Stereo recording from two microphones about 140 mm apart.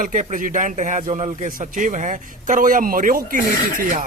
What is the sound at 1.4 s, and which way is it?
Speech, 75° right (ahead or behind).